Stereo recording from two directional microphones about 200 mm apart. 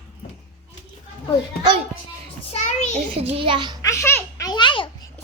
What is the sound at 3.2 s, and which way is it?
Speech, 30° right (ahead or behind).